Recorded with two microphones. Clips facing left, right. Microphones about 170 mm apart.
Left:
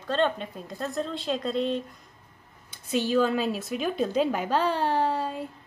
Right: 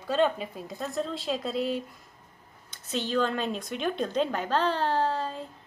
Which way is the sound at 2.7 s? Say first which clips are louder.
Left 4 dB; 10° left (ahead or behind).